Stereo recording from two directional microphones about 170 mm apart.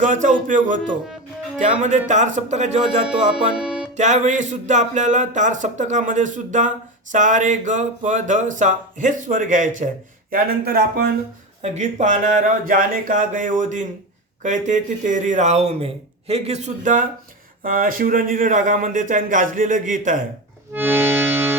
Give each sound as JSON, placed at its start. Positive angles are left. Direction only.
{"t": 0.0, "sound": "music", "side_deg": -45}
{"t": 2.0, "sound": "music", "side_deg": -45}
{"t": 3.1, "sound": "music", "side_deg": -5}
{"t": 3.9, "sound": "music", "side_deg": -45}
{"t": 10.3, "sound": "speech", "side_deg": -65}
{"t": 11.6, "sound": "music", "side_deg": -40}
{"t": 20.7, "sound": "music", "side_deg": -10}